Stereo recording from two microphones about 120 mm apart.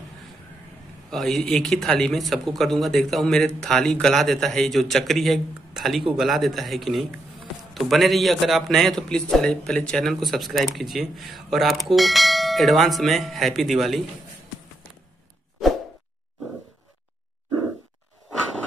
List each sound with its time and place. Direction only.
1.1 s speech: centre (ahead or behind)